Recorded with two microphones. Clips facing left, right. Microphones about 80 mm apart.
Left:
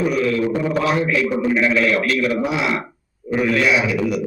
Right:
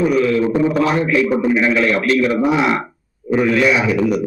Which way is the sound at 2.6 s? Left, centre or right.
Right.